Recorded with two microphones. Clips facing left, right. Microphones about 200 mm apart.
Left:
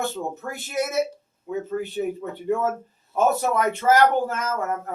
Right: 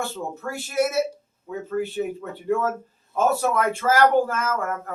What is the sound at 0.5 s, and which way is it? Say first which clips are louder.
Speech: right 3 dB; 20° left (ahead or behind).